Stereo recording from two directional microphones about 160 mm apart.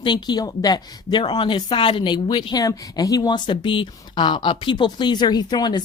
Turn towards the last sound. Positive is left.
turn(degrees=25)  # may be behind; listen again after turning